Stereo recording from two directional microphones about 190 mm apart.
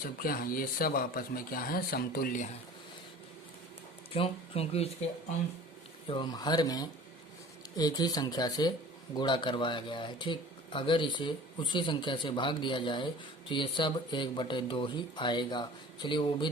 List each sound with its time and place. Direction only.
0.0 s speech: 50° left (ahead or behind)
4.1 s speech: 30° left (ahead or behind)
6.1 s speech: 25° left (ahead or behind)